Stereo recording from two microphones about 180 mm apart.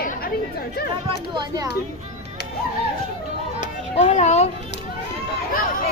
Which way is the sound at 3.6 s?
40° left (ahead or behind).